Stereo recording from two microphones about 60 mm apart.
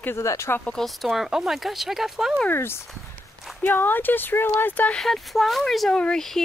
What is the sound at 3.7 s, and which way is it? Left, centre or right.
Speech, left.